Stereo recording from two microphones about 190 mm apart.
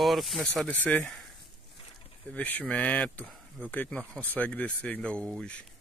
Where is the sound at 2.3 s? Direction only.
5° left (ahead or behind).